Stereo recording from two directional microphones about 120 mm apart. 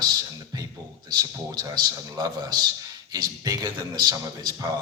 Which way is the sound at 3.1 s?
30° right (ahead or behind).